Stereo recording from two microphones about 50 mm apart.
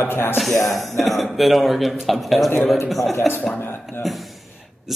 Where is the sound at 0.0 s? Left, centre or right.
Left.